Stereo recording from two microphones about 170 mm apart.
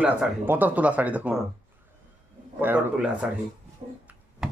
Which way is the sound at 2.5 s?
10° right (ahead or behind).